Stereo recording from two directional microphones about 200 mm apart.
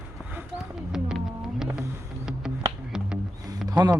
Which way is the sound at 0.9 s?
5° right (ahead or behind).